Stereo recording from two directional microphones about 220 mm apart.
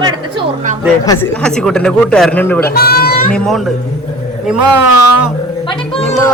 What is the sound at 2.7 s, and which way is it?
Speech, 45° left (ahead or behind).